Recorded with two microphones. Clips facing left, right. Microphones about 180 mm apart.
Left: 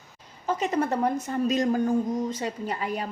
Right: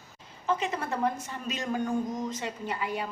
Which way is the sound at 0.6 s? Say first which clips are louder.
Left 5 dB; 40° left (ahead or behind).